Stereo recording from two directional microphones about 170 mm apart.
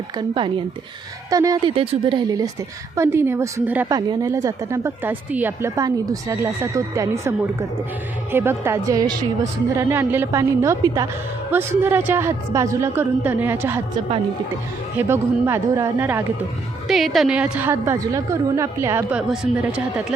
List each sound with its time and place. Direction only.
0.2 s speech: 30° right (ahead or behind)
2.9 s a woman's voice: 15° right (ahead or behind)
14.9 s a woman's voice: 15° right (ahead or behind)
16.9 s a woman's voice: centre (ahead or behind)
19.3 s speech: 5° right (ahead or behind)